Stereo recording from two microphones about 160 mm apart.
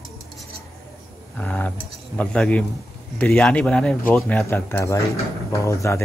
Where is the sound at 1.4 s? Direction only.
10° left (ahead or behind).